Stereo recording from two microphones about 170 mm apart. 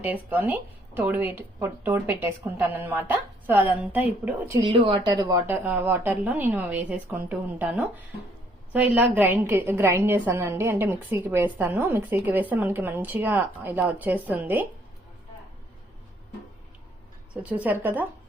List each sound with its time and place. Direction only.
0.0 s a woman's voice: 10° right (ahead or behind)
4.6 s speech: 30° right (ahead or behind)
5.5 s a woman's voice: 10° right (ahead or behind)
17.3 s a woman's voice: 10° right (ahead or behind)